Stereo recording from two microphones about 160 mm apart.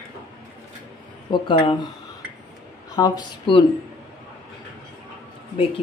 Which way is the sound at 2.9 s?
25° left (ahead or behind).